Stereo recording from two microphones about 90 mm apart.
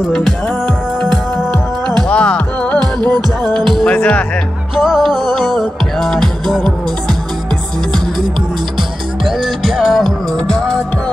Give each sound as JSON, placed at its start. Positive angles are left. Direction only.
{"t": 0.0, "sound": "music", "side_deg": 0}
{"t": 2.0, "sound": "music", "side_deg": 15}
{"t": 2.8, "sound": "music", "side_deg": -50}
{"t": 3.7, "sound": "music", "side_deg": 10}
{"t": 4.7, "sound": "music", "side_deg": 0}
{"t": 9.2, "sound": "music", "side_deg": 0}